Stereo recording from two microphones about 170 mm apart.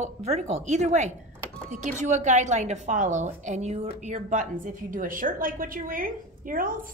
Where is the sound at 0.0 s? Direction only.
40° right (ahead or behind).